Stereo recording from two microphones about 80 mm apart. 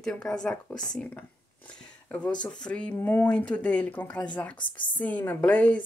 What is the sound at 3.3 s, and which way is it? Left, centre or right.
A woman's voice, centre.